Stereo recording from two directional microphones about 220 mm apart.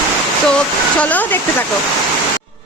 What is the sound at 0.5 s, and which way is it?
A woman's voice, 5° left (ahead or behind).